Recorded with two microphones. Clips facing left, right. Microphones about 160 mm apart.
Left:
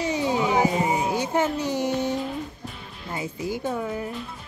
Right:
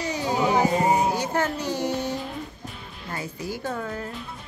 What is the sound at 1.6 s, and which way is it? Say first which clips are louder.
Child singing: left 2 dB; 20° left (ahead or behind).